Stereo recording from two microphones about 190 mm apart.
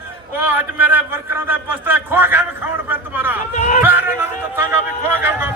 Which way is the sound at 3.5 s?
40° left (ahead or behind).